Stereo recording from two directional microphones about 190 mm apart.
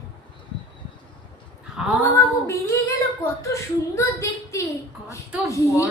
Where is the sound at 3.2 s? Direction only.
15° left (ahead or behind).